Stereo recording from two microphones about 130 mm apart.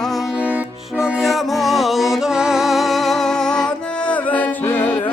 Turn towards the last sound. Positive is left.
turn(degrees=15)  # may be behind; listen again after turning